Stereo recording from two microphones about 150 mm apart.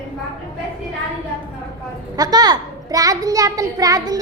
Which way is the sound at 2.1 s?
25° right (ahead or behind).